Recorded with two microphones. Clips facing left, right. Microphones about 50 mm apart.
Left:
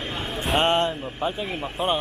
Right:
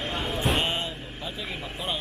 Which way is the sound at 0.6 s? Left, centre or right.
Left.